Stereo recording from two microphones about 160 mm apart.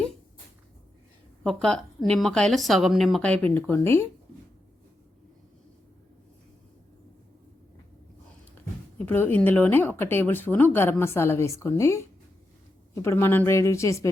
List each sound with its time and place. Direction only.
1.5 s a woman's voice: 5° left (ahead or behind)
9.0 s speech: 10° left (ahead or behind)